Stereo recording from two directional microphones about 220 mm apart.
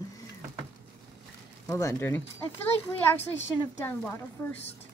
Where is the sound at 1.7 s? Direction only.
15° left (ahead or behind).